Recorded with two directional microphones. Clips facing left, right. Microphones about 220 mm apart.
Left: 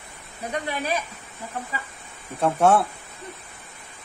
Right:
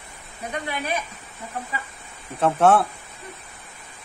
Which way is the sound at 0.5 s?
35° left (ahead or behind).